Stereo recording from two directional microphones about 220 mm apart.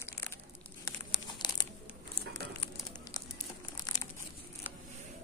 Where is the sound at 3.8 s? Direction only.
15° left (ahead or behind).